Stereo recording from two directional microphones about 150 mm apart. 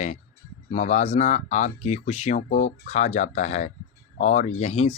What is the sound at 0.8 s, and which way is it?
Speech, 50° left (ahead or behind).